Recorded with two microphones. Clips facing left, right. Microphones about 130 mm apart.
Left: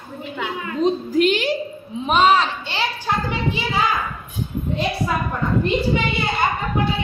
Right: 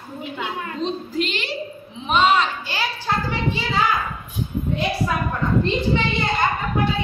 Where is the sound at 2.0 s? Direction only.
40° left (ahead or behind).